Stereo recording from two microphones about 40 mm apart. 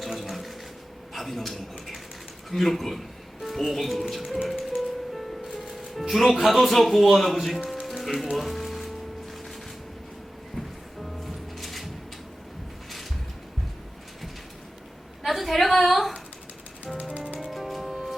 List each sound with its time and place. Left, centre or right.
0.0 s water: centre
1.1 s speech: centre
4.4 s music: centre
11.0 s music: centre
15.2 s a sound: centre
16.9 s music: right
17.5 s music: centre